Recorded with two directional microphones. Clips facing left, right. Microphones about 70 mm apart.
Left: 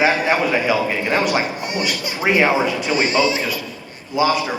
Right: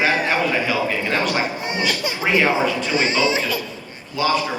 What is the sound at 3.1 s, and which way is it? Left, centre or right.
Speech, right.